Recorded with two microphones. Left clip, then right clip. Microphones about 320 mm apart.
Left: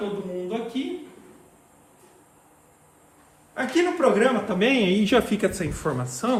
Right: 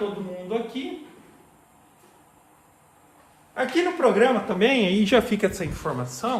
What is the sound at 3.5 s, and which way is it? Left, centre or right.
A man's voice, right.